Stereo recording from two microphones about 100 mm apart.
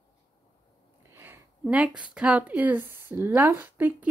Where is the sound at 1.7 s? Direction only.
10° right (ahead or behind).